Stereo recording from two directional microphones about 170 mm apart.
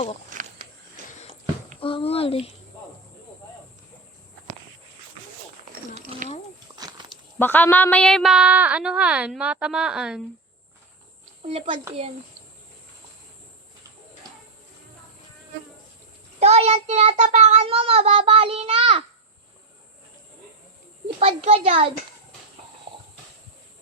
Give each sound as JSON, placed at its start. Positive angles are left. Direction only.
{"t": 0.3, "sound": "a sound", "side_deg": -50}
{"t": 1.8, "sound": "a child's voice", "side_deg": 30}
{"t": 6.7, "sound": "a sound", "side_deg": -25}
{"t": 7.3, "sound": "speech", "side_deg": 10}
{"t": 11.4, "sound": "child singing", "side_deg": -35}
{"t": 16.4, "sound": "child singing", "side_deg": -40}
{"t": 17.2, "sound": "a child's voice", "side_deg": -40}
{"t": 21.2, "sound": "child singing", "side_deg": -35}